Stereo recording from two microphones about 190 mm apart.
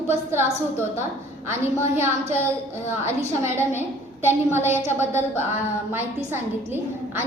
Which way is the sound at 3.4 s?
15° right (ahead or behind).